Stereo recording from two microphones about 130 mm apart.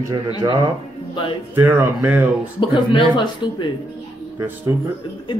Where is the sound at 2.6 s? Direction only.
40° left (ahead or behind).